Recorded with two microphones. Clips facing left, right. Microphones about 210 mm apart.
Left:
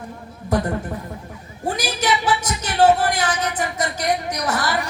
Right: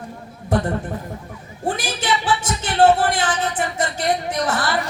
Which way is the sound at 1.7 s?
40° left (ahead or behind).